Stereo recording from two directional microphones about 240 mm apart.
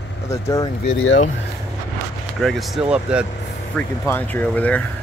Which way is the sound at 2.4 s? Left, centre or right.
Centre.